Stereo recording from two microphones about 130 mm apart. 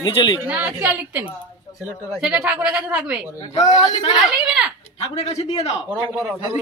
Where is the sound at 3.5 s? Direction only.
60° left (ahead or behind).